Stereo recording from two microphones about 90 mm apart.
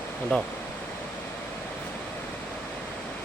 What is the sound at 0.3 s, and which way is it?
Speech, 10° left (ahead or behind).